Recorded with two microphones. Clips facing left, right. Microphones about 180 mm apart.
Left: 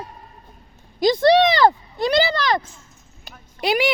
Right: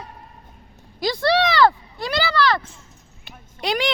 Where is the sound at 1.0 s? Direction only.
20° left (ahead or behind).